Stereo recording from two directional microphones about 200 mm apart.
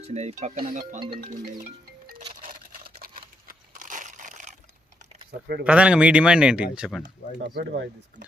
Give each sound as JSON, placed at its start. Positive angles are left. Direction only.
{"t": 0.0, "sound": "speech", "side_deg": -30}
{"t": 1.3, "sound": "music", "side_deg": -40}
{"t": 2.4, "sound": "a sound", "side_deg": -45}
{"t": 5.3, "sound": "speech", "side_deg": -50}
{"t": 5.6, "sound": "speech", "side_deg": -5}
{"t": 7.3, "sound": "speech", "side_deg": -60}